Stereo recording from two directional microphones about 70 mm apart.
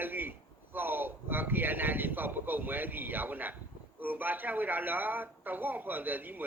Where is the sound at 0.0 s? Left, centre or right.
Right.